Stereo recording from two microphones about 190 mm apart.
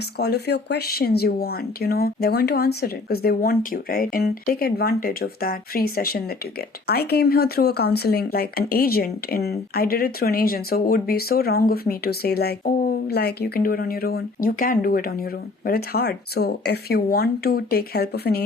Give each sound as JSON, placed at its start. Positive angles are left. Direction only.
{"t": 0.0, "sound": "speech", "side_deg": 55}